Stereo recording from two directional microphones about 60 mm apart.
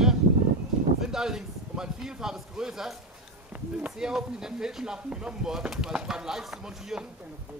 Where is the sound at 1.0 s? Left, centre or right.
Centre.